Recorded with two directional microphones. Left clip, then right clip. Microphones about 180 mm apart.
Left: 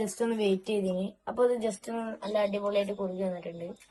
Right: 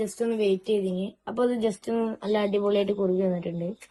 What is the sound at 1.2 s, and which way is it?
Speech, 30° right (ahead or behind).